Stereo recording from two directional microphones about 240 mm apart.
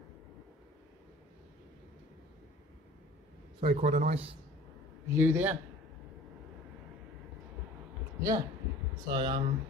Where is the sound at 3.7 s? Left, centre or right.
Right.